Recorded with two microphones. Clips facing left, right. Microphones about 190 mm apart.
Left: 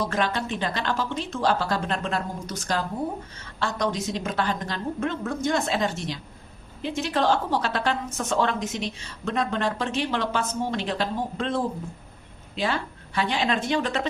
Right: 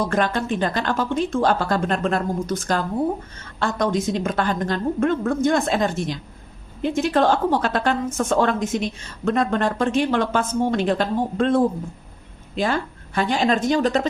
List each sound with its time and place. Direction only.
0.0 s a woman's voice: 50° right (ahead or behind)